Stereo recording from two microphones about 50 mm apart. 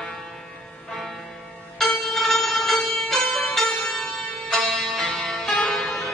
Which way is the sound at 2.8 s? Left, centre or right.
Centre.